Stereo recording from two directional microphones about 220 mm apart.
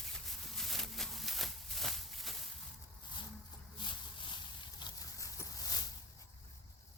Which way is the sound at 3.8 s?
20° left (ahead or behind).